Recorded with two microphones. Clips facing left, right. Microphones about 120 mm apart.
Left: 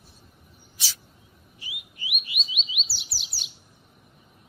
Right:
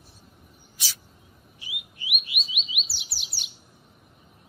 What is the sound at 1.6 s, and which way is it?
Bird, centre (ahead or behind).